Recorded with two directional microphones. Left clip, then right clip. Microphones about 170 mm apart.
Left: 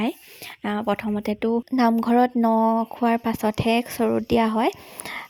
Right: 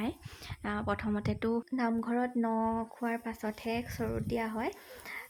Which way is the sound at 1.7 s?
50° left (ahead or behind).